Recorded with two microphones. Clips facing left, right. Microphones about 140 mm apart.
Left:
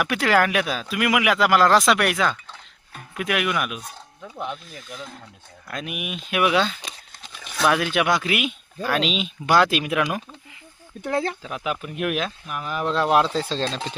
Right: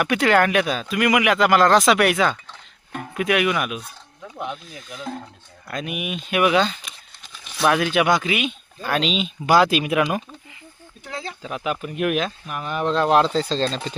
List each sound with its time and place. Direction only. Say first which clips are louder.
0.0 s speech: right 2 dB; centre (ahead or behind)
11.0 s speech: left 9 dB; 55° left (ahead or behind)
11.4 s speech: right 2 dB; centre (ahead or behind)